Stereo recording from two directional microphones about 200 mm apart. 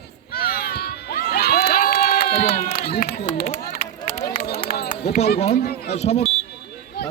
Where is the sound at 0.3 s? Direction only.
50° left (ahead or behind).